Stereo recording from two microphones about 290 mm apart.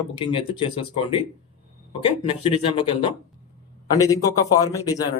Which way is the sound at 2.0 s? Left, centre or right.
Centre.